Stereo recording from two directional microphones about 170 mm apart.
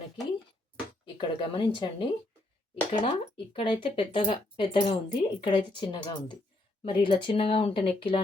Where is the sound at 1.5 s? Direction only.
30° left (ahead or behind).